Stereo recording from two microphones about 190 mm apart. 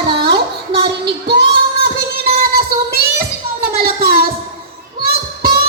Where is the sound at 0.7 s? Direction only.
30° right (ahead or behind).